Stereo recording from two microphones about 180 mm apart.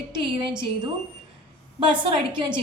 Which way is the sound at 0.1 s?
30° right (ahead or behind).